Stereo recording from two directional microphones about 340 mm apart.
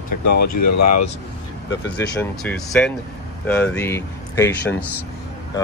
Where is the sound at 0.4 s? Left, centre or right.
Left.